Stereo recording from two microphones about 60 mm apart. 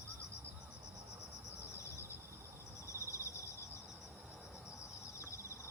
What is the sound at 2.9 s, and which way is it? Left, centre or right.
Cricket, left.